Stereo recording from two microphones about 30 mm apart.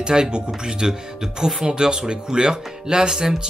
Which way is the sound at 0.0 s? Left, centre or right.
Right.